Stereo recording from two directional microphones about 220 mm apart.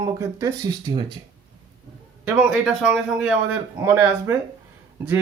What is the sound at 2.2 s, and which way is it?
A man's voice, 5° right (ahead or behind).